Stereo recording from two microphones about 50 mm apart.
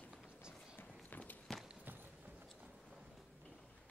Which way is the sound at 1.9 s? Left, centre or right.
Right.